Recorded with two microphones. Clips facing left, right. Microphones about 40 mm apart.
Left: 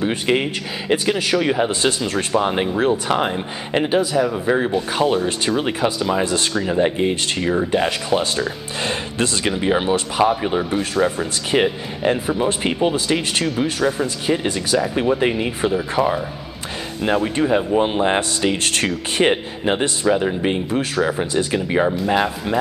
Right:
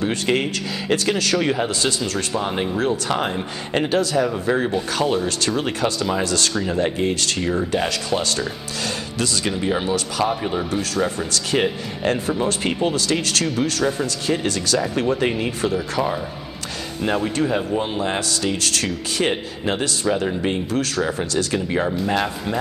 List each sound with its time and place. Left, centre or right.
0.0 s speech: centre
1.7 s speech: left
6.5 s speech: centre
8.8 s speech: left
10.2 s speech: centre
17.0 s speech: centre
17.8 s speech: left
20.1 s speech: centre